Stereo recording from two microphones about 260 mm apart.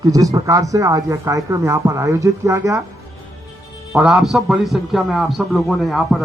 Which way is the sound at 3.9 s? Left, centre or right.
Centre.